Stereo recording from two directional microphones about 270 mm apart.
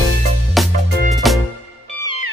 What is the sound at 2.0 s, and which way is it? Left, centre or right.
Music, right.